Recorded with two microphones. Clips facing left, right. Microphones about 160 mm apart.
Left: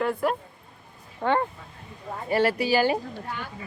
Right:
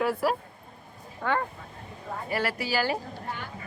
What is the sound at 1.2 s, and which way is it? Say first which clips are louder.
Speech: left 4 dB; 25° left (ahead or behind).